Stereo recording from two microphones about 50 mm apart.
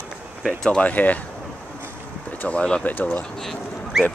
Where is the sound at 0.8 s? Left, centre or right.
Left.